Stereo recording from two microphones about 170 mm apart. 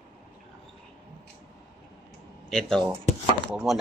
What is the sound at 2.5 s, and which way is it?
Speech, centre (ahead or behind).